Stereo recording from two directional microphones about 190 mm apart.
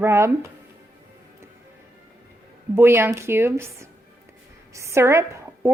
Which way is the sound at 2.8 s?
10° right (ahead or behind).